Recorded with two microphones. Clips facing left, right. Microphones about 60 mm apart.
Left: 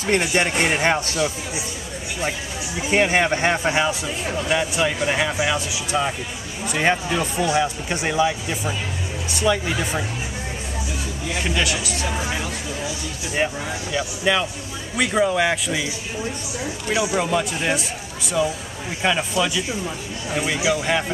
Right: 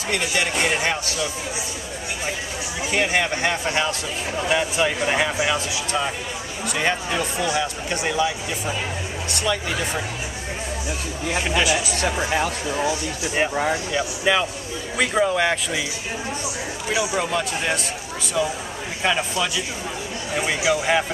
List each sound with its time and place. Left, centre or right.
0.0 s speech: left
2.9 s speech: left
4.6 s speech: centre
6.6 s speech: centre
11.4 s speech: centre
12.3 s speech: right
13.4 s speech: centre
16.9 s speech: centre